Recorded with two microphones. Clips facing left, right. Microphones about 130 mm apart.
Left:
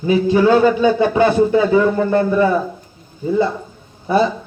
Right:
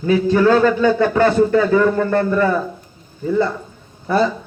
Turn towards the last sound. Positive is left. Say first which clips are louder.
# left 1 dB
turn(degrees=15)  # may be behind; listen again after turning